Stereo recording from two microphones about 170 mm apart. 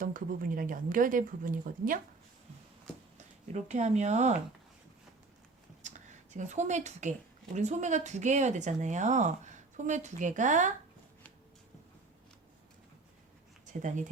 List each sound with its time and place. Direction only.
0.0 s speech: 55° right (ahead or behind)
3.2 s speech: 45° right (ahead or behind)
5.8 s a sound: 45° right (ahead or behind)
7.5 s speech: 45° right (ahead or behind)